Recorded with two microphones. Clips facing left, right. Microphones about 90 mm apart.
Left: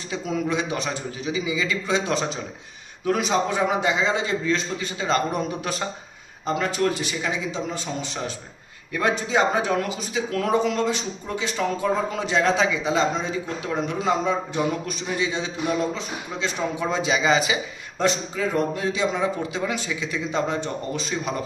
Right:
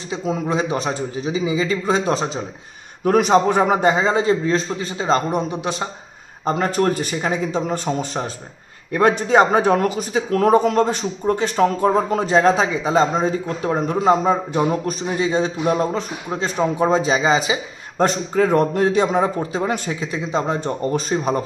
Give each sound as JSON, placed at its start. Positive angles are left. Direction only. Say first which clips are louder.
{"t": 0.1, "sound": "a man's voice", "louder": "right 3 dB", "side_deg": -30}
{"t": 3.0, "sound": "a man's voice", "louder": "right 7 dB", "side_deg": -55}
{"t": 6.4, "sound": "a man's voice", "louder": "right 4 dB", "side_deg": -45}
{"t": 17.9, "sound": "a man's voice", "louder": "right 6 dB", "side_deg": -50}